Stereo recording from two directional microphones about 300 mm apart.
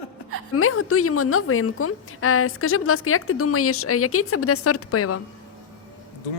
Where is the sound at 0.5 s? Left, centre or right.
Left.